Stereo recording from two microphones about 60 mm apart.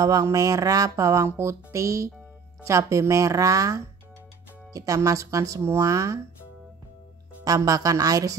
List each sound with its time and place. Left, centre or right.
0.0 s speech: right
5.6 s speech: right
7.4 s a woman's voice: right